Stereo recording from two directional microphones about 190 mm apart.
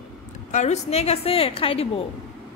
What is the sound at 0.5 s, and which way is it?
A woman's voice, 35° left (ahead or behind).